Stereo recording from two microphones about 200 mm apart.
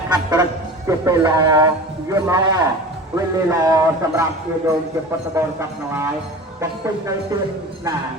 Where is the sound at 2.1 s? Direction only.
15° right (ahead or behind).